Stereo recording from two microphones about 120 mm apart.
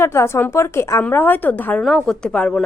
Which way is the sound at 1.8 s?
5° left (ahead or behind).